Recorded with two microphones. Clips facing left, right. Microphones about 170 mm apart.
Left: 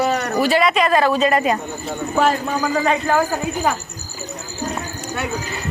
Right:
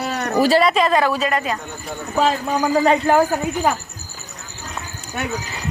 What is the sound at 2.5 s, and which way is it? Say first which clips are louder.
Speech: right 3 dB; 20° right (ahead or behind).